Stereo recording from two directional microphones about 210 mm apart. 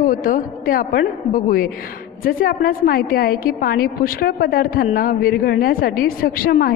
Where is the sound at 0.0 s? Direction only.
40° left (ahead or behind).